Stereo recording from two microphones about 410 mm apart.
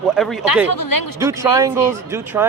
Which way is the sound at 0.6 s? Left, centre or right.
Left.